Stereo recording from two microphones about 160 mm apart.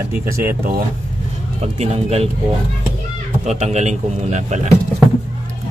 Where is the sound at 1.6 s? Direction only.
40° right (ahead or behind).